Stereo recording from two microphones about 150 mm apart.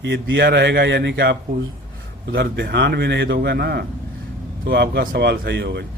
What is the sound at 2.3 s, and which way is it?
A man's voice, 90° right.